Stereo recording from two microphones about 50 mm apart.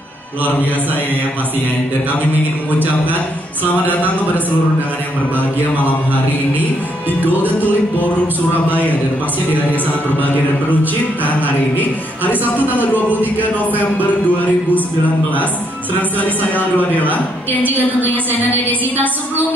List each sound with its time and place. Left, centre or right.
7.1 s music: right
11.2 s speech: left
16.7 s speech: left
17.6 s music: right